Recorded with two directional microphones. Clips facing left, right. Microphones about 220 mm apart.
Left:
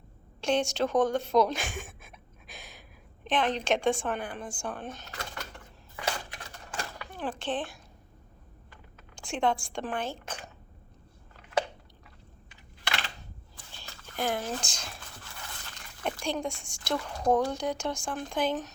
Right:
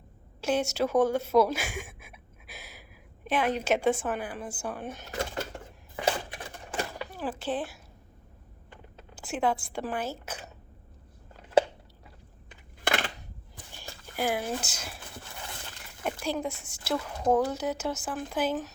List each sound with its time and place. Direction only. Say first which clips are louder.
0.4 s a woman's voice: even; 5° right (ahead or behind)
5.1 s a sound: right 8 dB; 30° right (ahead or behind)
7.1 s speech: left 2 dB; 5° right (ahead or behind)
9.1 s a woman's voice: even; 5° right (ahead or behind)
12.8 s a sound: right 7 dB; 50° right (ahead or behind)
13.7 s speech: right 2 dB; 10° right (ahead or behind)
16.0 s speech: right 1 dB; 5° right (ahead or behind)